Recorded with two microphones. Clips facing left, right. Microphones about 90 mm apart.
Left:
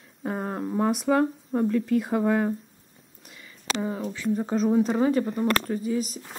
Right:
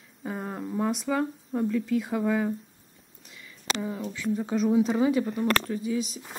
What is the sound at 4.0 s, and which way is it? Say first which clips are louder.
Speech: left 2 dB; 30° left (ahead or behind).